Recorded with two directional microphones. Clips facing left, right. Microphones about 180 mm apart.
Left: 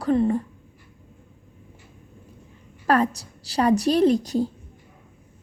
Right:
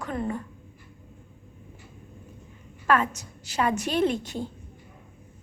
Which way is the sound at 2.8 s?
35° left (ahead or behind).